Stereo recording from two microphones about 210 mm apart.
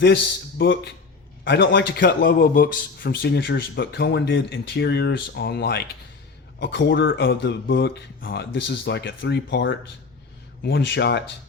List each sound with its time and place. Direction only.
0.6 s speech: 60° left (ahead or behind)